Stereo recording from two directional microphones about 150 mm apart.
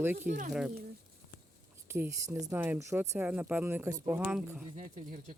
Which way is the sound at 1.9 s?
20° right (ahead or behind).